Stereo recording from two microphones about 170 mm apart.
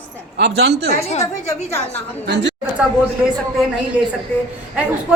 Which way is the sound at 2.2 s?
90° right.